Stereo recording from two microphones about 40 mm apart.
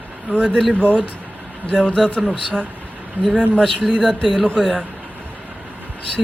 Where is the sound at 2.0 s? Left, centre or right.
Centre.